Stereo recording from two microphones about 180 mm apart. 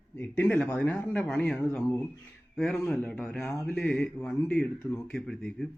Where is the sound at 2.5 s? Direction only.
5° left (ahead or behind).